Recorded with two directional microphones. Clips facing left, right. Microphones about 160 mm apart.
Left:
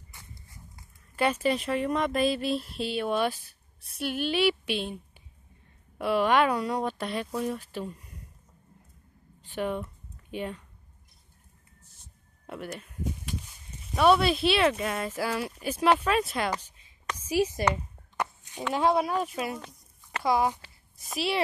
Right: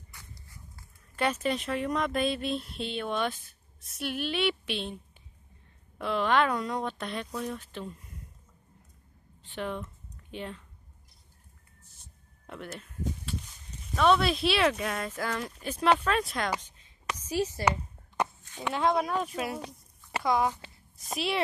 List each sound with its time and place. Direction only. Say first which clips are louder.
0.1 s dog: left 2 dB; 25° left (ahead or behind)
1.1 s speech: left 3 dB; 5° left (ahead or behind)
5.9 s speech: left 3 dB; 10° left (ahead or behind)
9.6 s speech: left 4 dB; 10° left (ahead or behind)
12.6 s a sound: even; 10° left (ahead or behind)
13.9 s speech: left 2 dB; 10° left (ahead or behind)
17.6 s a sound: even; 20° right (ahead or behind)
18.7 s speech: left 2 dB; 10° left (ahead or behind)
19.6 s a sound: right 5 dB; 10° right (ahead or behind)
20.2 s speech: left 2 dB; 10° left (ahead or behind)